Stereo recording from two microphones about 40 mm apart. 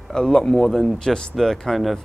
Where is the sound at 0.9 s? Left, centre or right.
Centre.